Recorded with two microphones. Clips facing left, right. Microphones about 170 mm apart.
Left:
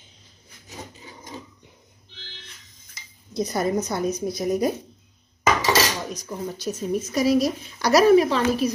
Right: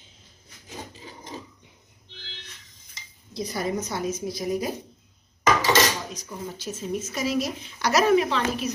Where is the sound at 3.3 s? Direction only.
45° left (ahead or behind).